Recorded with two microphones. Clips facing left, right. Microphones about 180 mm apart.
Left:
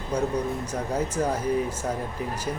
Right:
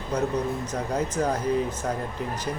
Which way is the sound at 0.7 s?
10° left (ahead or behind).